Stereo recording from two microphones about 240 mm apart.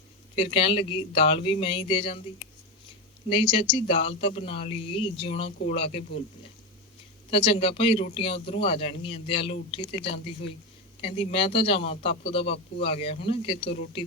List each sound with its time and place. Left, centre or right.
0.3 s speech: left
3.2 s speech: left
7.3 s speech: left